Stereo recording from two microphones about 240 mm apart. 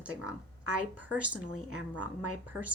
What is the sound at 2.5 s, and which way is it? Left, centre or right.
Speech, centre.